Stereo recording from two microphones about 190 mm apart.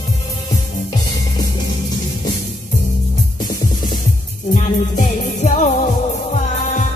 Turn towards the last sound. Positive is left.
turn(degrees=40)  # may be behind; listen again after turning